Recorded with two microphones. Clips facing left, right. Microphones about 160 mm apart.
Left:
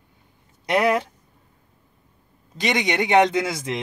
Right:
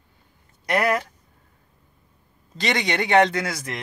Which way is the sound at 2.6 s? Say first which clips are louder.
Left 2 dB; 15° left (ahead or behind).